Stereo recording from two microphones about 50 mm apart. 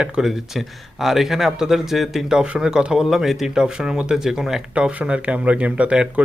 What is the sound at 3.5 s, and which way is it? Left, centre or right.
Speech, centre.